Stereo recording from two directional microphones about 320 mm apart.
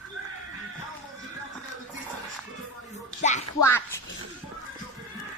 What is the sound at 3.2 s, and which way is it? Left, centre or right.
Speech, left.